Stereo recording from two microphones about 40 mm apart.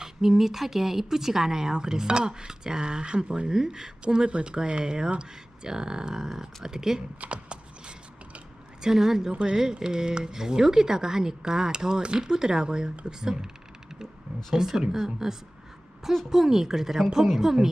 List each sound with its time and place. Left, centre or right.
0.0 s speech: centre
4.3 s speech: right
4.8 s speech: right
7.2 s mechanisms: right
8.8 s speech: centre
14.5 s speech: centre